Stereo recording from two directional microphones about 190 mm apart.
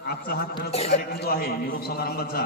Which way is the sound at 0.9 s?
55° left (ahead or behind).